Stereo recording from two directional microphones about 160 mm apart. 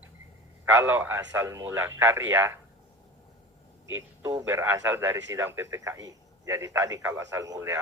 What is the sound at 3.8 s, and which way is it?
A man's voice, 20° right (ahead or behind).